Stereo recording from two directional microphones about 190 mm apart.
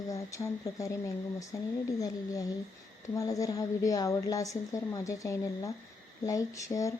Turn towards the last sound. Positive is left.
turn(degrees=15)  # may be behind; listen again after turning